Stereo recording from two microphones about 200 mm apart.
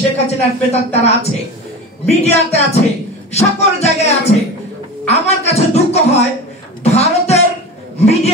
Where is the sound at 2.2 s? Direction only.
30° left (ahead or behind).